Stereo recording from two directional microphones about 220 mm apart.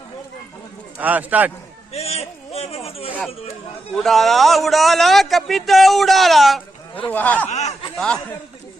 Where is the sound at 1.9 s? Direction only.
30° left (ahead or behind).